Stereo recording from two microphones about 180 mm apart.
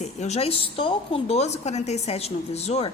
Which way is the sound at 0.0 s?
40° left (ahead or behind).